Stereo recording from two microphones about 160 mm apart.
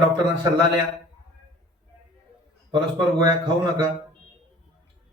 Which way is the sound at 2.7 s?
25° right (ahead or behind).